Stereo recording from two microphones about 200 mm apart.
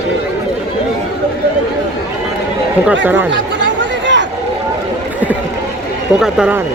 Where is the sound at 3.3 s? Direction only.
65° right (ahead or behind).